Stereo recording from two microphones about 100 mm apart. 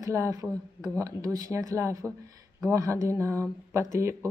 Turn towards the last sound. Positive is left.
turn(degrees=-30)  # may be behind; listen again after turning